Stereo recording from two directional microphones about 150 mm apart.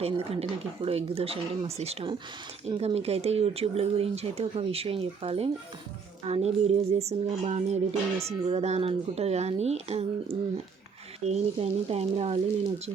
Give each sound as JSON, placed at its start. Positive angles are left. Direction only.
{"t": 0.0, "sound": "speech", "side_deg": -40}